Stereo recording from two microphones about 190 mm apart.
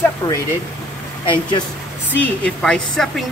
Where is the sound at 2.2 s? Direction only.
5° left (ahead or behind).